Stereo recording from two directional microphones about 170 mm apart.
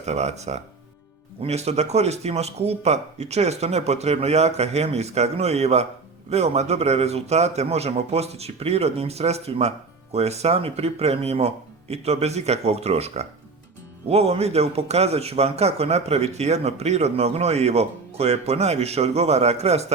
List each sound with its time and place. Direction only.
0.0 s a man's voice: 40° right (ahead or behind)